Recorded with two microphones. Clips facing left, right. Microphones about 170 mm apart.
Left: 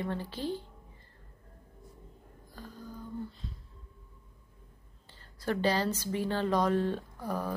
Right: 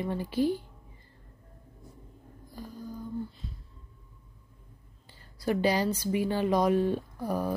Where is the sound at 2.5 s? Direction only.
10° right (ahead or behind).